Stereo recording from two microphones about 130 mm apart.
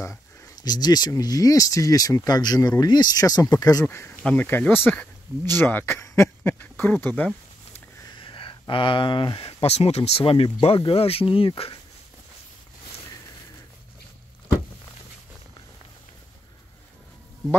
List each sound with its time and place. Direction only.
0.0 s speech: 25° left (ahead or behind)
4.2 s speech: 10° left (ahead or behind)
7.7 s speech: 40° left (ahead or behind)